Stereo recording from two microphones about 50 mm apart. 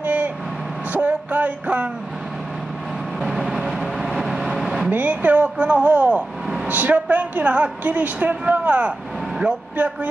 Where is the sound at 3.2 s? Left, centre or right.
Centre.